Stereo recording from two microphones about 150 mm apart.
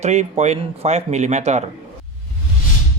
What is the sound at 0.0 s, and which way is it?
Speech, 50° right (ahead or behind).